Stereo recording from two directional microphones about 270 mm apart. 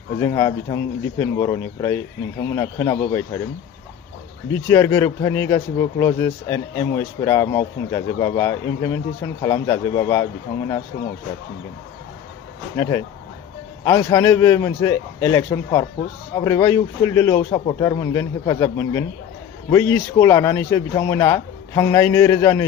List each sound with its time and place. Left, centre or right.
0.2 s speech: centre
4.7 s speech: centre
10.9 s speech: left
12.7 s speech: centre